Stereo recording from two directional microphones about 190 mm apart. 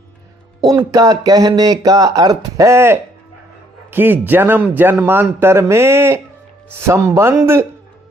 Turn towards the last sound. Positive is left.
turn(degrees=-15)  # may be behind; listen again after turning